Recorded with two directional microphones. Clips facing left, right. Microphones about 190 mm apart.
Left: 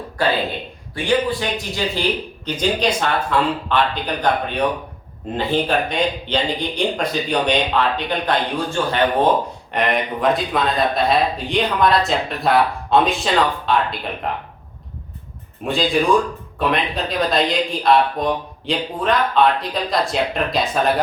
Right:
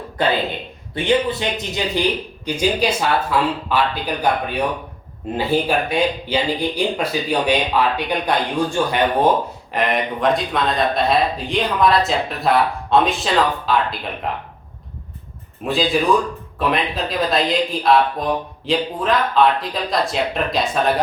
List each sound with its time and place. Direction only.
0.2 s speech: 20° right (ahead or behind)
2.4 s speech: 10° right (ahead or behind)
9.7 s speech: centre (ahead or behind)
15.6 s speech: centre (ahead or behind)